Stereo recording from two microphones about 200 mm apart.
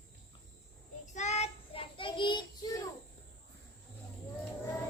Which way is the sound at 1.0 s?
35° left (ahead or behind).